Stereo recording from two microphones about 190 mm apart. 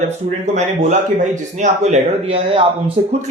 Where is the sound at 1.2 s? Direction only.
40° right (ahead or behind).